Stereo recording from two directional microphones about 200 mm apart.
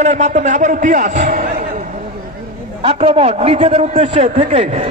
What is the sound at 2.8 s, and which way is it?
A man's voice, 30° right (ahead or behind).